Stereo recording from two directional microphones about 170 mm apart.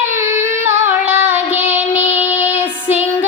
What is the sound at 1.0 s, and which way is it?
Child singing, 10° right (ahead or behind).